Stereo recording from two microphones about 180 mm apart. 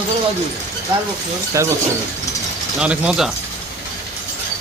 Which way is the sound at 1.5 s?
15° right (ahead or behind).